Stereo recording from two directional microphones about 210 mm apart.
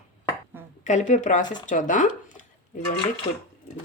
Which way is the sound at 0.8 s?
35° left (ahead or behind).